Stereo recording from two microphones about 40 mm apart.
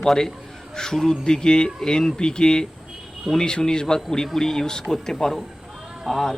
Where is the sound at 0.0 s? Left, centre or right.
Centre.